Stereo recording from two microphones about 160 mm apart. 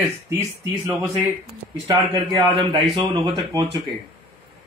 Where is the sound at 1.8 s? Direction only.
25° right (ahead or behind).